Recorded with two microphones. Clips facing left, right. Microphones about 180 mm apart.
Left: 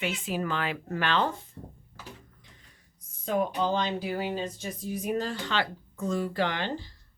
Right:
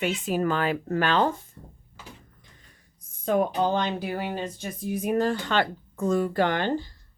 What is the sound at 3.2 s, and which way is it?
Speech, 50° right (ahead or behind).